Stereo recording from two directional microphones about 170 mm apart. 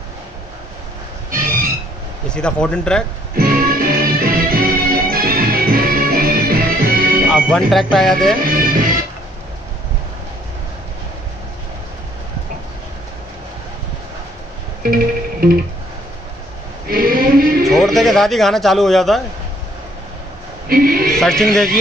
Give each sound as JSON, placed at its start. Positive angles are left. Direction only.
{"t": 1.3, "sound": "a sound", "side_deg": -55}
{"t": 2.2, "sound": "speech", "side_deg": 5}
{"t": 3.3, "sound": "music", "side_deg": -60}
{"t": 7.2, "sound": "speech", "side_deg": -5}
{"t": 8.5, "sound": "music", "side_deg": -55}
{"t": 16.8, "sound": "a sound", "side_deg": -60}
{"t": 17.6, "sound": "speech", "side_deg": 0}
{"t": 20.6, "sound": "a sound", "side_deg": -60}
{"t": 21.2, "sound": "a man's voice", "side_deg": 5}